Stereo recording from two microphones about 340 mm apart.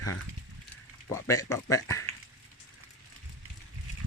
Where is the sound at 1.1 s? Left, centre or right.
Centre.